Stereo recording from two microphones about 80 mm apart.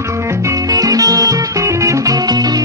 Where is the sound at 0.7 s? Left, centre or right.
Right.